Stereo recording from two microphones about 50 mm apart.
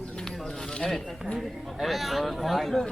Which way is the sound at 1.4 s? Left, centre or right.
Centre.